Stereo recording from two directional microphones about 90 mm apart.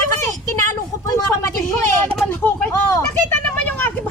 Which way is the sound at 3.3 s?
15° left (ahead or behind).